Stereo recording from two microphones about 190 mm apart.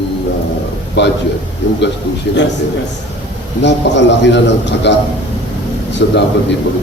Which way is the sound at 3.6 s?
65° left (ahead or behind).